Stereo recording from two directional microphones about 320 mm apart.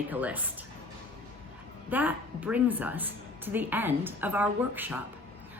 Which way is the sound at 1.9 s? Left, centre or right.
Centre.